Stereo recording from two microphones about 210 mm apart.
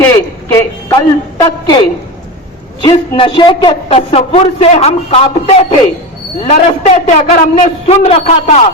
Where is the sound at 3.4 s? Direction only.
25° left (ahead or behind).